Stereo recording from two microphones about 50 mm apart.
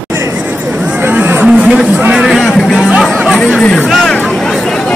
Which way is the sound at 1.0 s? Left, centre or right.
Right.